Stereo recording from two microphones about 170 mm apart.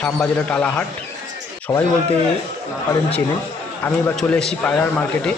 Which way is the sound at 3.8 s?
15° left (ahead or behind).